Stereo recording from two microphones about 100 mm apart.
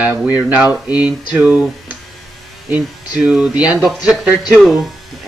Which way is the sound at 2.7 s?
10° right (ahead or behind).